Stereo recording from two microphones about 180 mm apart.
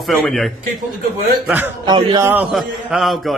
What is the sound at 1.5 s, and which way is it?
Speech, 10° right (ahead or behind).